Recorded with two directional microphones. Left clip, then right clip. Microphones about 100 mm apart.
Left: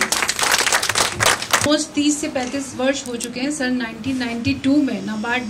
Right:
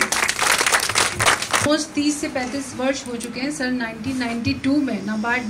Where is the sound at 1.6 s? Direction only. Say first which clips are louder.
Left 2 dB; 15° left (ahead or behind).